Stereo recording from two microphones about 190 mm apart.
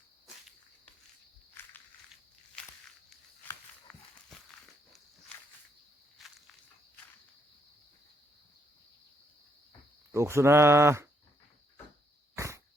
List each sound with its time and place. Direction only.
1.6 s walk: 10° left (ahead or behind)
3.9 s walk: 5° left (ahead or behind)
6.2 s walk: centre (ahead or behind)
10.1 s speech: 15° right (ahead or behind)
12.4 s dog: 15° right (ahead or behind)